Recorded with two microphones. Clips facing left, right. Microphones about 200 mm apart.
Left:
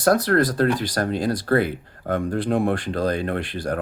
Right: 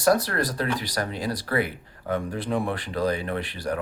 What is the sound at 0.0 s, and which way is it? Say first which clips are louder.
Speech: left 4 dB; 50° left (ahead or behind).